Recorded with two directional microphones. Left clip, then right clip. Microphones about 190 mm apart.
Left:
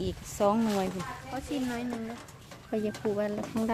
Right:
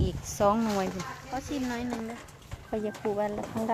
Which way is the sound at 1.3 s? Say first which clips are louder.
Right 1 dB; 30° right (ahead or behind).